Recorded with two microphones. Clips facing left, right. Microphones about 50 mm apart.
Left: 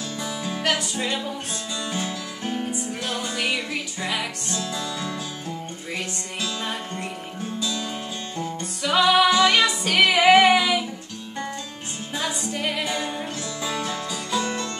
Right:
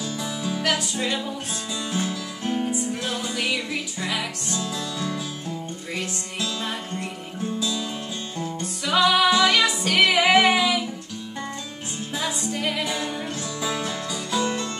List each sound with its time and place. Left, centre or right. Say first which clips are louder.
0.2 s music: left 1 dB; centre
3.4 s music: even; centre
8.8 s music: left 1 dB; centre
9.3 s music: left 1 dB; centre
9.8 s music: left 3 dB; centre
12.1 s music: even; centre
12.5 s music: even; centre
12.9 s music: even; centre
13.4 s music: right 1 dB; centre